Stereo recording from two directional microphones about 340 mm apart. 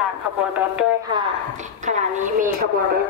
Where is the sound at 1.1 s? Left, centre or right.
Right.